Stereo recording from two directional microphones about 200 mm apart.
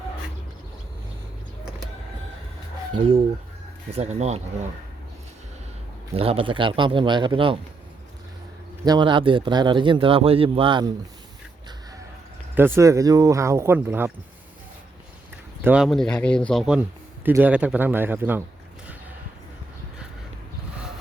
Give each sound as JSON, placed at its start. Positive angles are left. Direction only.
{"t": 2.9, "sound": "a man's voice", "side_deg": -25}
{"t": 6.1, "sound": "a man's voice", "side_deg": -30}
{"t": 8.8, "sound": "a man's voice", "side_deg": -20}
{"t": 12.5, "sound": "speech", "side_deg": -10}
{"t": 15.6, "sound": "speech", "side_deg": -5}